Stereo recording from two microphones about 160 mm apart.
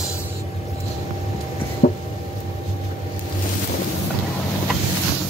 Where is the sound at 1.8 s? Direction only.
50° left (ahead or behind).